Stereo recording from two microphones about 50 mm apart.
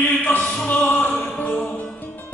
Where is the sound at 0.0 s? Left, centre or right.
Left.